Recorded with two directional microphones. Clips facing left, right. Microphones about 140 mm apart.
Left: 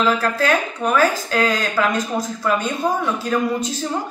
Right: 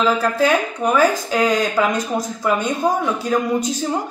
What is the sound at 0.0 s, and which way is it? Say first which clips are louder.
A woman's voice: right 2 dB; 10° right (ahead or behind).